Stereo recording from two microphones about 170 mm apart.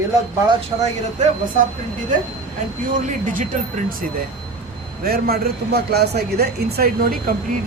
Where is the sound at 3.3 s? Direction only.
50° right (ahead or behind).